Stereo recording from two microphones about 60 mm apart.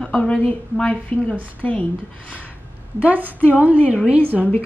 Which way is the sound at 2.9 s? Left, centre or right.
Right.